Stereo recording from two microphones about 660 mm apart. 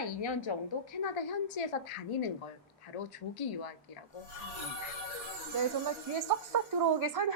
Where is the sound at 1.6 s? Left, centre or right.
Left.